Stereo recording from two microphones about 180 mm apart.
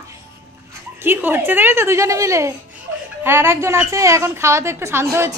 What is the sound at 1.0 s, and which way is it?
A woman's voice, 10° right (ahead or behind).